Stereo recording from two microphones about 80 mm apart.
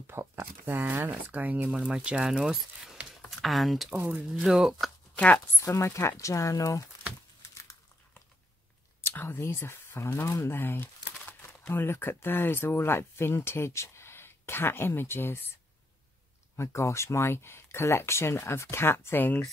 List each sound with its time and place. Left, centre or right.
0.0 s speech: right; by 3.9 s centre
3.9 s speech: right
4.3 s speech: centre
5.1 s speech: centre
5.6 s speech: left
9.0 s speech: left
16.5 s speech: left